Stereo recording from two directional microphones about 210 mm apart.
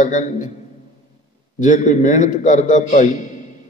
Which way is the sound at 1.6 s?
35° left (ahead or behind).